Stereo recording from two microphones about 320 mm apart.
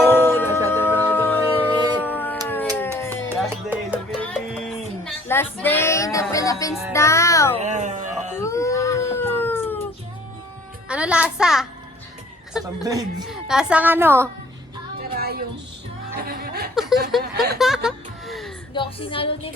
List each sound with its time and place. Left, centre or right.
0.1 s music: centre
2.0 s howl: centre
2.5 s music: centre
3.2 s music: centre
6.9 s a child's voice: centre
7.5 s a sound: right
8.4 s a sound: centre
10.8 s a child's voice: centre
15.1 s a sound: right
16.1 s chuckle: right
17.1 s a sound: centre
17.6 s music: centre
18.7 s music: centre